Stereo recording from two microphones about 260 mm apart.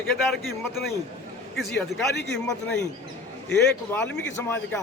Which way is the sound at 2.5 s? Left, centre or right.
Centre.